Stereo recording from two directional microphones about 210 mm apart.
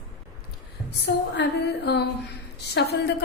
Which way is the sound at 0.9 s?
55° left (ahead or behind).